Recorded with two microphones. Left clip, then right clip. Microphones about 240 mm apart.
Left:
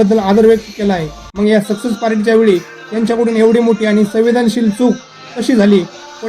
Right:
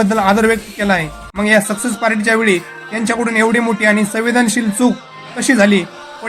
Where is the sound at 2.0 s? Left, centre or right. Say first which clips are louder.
Left 2 dB; right.